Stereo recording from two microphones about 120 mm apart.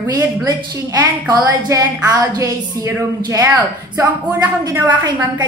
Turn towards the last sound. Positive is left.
turn(degrees=-35)  # may be behind; listen again after turning